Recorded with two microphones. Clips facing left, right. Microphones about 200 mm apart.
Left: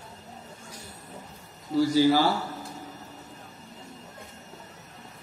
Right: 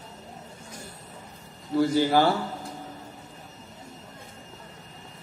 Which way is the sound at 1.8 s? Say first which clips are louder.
Even; 55° right (ahead or behind).